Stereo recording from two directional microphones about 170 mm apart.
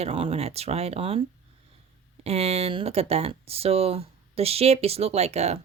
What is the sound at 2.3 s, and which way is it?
Speech, 40° right (ahead or behind).